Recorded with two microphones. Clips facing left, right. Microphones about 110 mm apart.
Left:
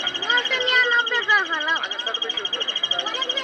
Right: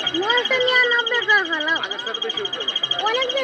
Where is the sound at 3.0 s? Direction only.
65° right (ahead or behind).